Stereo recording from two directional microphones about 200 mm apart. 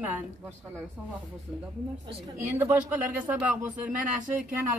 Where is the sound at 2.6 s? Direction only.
10° right (ahead or behind).